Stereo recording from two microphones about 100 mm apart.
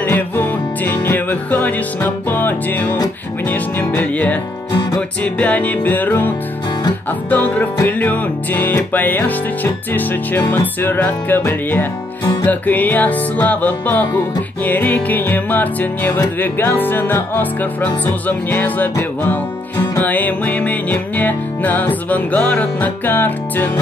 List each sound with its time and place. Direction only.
0.0 s music: 20° left (ahead or behind)
3.9 s speech: 15° left (ahead or behind)
5.2 s music: 15° left (ahead or behind)